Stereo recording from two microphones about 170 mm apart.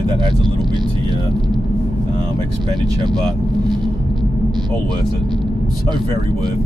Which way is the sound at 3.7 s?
25° right (ahead or behind).